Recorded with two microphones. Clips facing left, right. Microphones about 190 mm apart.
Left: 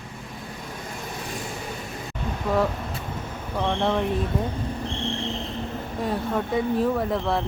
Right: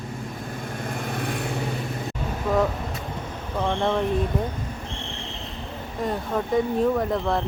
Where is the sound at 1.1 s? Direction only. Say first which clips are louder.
Right 5 dB; 60° right (ahead or behind).